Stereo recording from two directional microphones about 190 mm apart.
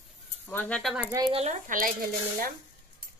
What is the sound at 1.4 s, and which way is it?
Speech, 40° right (ahead or behind).